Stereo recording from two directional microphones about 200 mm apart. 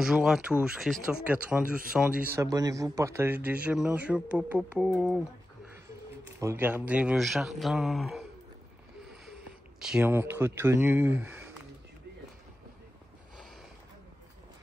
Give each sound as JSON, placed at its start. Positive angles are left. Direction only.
{"t": 0.0, "sound": "speech", "side_deg": 0}
{"t": 2.4, "sound": "speech", "side_deg": -20}
{"t": 6.4, "sound": "speech", "side_deg": -10}
{"t": 9.8, "sound": "speech", "side_deg": -5}